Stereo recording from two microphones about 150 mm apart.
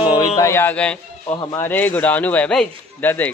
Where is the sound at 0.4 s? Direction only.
15° left (ahead or behind).